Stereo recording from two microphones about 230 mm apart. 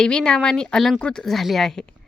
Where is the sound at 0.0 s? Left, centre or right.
Centre.